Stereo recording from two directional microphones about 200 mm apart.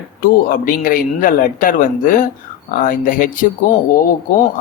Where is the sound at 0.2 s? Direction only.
45° left (ahead or behind).